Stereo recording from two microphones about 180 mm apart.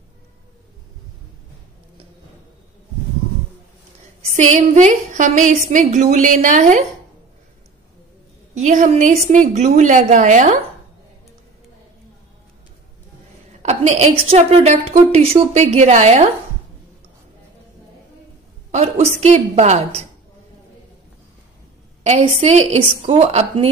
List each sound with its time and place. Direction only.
4.4 s a woman's voice: 40° right (ahead or behind)
8.5 s a woman's voice: 45° right (ahead or behind)
13.6 s a woman's voice: 40° right (ahead or behind)
18.7 s a woman's voice: 40° right (ahead or behind)
22.0 s a woman's voice: 35° right (ahead or behind)